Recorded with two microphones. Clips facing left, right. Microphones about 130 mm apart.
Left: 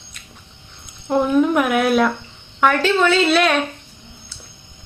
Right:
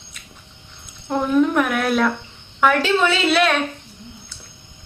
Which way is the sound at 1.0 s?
10° left (ahead or behind).